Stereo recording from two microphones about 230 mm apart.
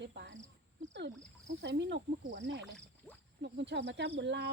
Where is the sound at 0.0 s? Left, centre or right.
Right.